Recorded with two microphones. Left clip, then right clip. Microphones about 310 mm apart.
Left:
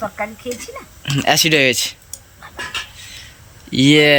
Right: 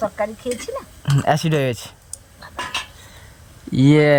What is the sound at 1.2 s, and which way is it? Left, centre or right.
Speech, right.